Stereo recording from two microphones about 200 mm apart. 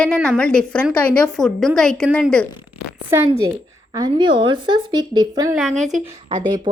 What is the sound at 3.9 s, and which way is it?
A woman's voice, 20° right (ahead or behind).